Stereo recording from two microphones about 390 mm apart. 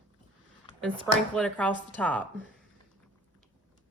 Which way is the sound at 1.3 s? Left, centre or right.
Centre.